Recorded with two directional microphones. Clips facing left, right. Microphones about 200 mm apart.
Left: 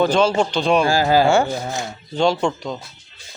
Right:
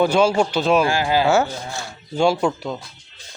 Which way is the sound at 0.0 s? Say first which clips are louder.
Even; 10° right (ahead or behind).